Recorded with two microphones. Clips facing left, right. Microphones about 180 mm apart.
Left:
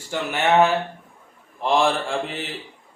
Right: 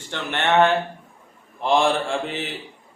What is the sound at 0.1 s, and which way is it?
A man's voice, 5° left (ahead or behind).